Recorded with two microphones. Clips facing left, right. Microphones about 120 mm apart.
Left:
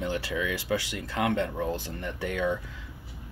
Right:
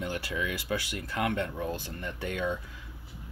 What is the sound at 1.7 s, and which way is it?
Speech, 20° left (ahead or behind).